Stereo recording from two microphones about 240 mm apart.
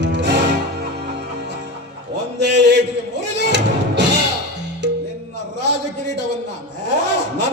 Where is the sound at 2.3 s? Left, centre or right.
Right.